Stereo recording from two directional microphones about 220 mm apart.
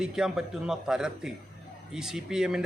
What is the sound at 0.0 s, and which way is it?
A man's voice, centre (ahead or behind).